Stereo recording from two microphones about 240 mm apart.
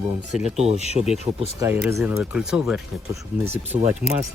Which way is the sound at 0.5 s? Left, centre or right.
Right.